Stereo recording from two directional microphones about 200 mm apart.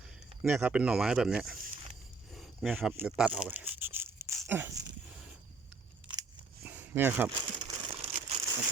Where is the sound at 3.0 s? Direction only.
5° right (ahead or behind).